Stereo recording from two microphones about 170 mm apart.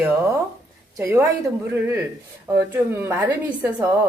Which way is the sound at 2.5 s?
15° right (ahead or behind).